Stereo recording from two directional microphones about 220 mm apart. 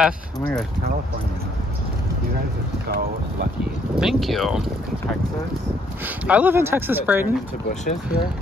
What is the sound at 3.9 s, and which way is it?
Speech, centre (ahead or behind).